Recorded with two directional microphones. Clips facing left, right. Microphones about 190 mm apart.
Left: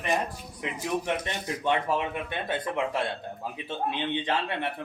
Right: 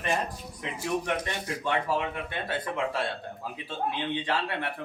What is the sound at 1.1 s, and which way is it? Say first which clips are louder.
Speech: left 1 dB; 20° left (ahead or behind).